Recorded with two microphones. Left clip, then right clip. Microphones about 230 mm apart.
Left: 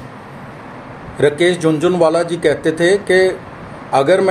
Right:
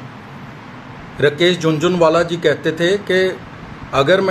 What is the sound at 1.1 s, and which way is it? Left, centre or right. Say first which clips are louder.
A man's voice: left 1 dB; centre.